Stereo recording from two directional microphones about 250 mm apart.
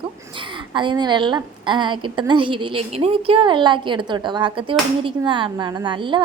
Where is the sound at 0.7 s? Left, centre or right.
Centre.